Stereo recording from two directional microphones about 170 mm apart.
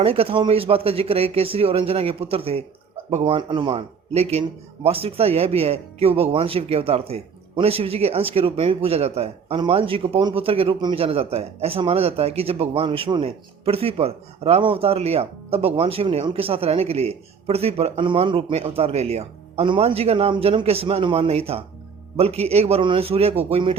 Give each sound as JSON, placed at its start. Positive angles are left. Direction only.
{"t": 0.0, "sound": "speech", "side_deg": -35}